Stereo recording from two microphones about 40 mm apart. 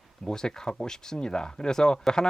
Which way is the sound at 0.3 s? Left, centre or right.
Centre.